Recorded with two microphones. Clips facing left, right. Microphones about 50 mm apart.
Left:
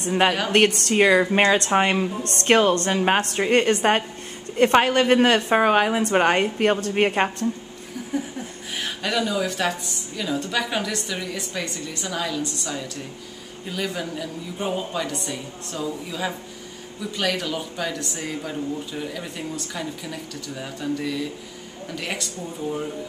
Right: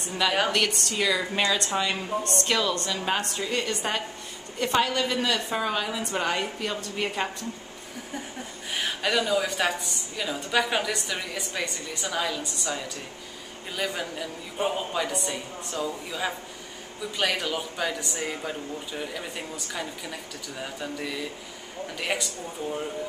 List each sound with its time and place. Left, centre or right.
0.5 s a woman's voice: left
8.1 s chuckle: centre
8.7 s a woman's voice: centre